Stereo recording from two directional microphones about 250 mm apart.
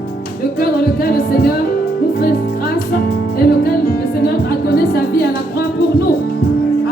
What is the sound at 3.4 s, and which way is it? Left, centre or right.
Music, left.